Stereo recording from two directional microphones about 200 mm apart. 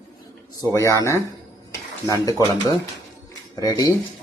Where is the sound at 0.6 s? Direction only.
15° left (ahead or behind).